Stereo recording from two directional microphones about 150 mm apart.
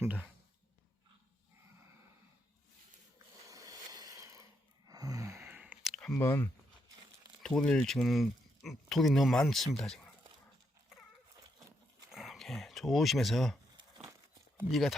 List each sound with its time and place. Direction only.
0.0 s speech: 10° right (ahead or behind)
3.5 s a sound: 25° right (ahead or behind)
5.9 s a sound: 5° left (ahead or behind)
6.1 s speech: 20° left (ahead or behind)
7.4 s speech: 5° left (ahead or behind)
12.1 s dog: centre (ahead or behind)
14.7 s speech: centre (ahead or behind)